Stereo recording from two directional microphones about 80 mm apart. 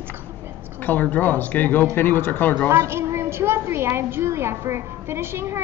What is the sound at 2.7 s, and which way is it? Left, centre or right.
A woman's voice, right.